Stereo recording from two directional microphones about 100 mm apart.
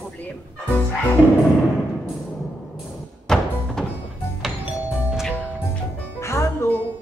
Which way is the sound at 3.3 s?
5° left (ahead or behind).